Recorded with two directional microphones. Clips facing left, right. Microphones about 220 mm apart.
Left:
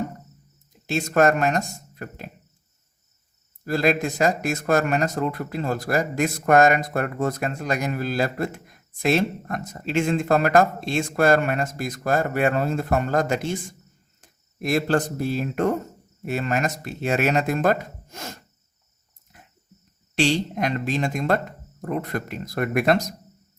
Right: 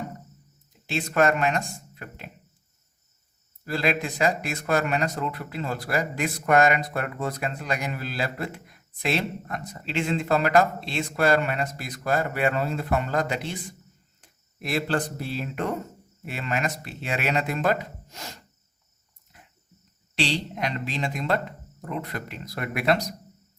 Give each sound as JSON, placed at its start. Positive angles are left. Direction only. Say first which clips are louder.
{"t": 0.9, "sound": "speech", "louder": "left 3 dB", "side_deg": 45}
{"t": 3.6, "sound": "speech", "louder": "left 5 dB", "side_deg": 45}
{"t": 20.1, "sound": "speech", "louder": "left 6 dB", "side_deg": 45}